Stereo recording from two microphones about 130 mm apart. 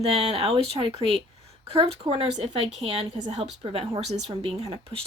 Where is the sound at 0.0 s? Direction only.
50° right (ahead or behind).